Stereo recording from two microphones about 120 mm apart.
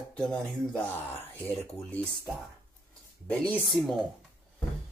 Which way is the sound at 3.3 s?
10° left (ahead or behind).